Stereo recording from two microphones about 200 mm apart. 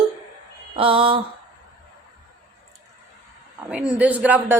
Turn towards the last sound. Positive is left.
turn(degrees=-5)  # may be behind; listen again after turning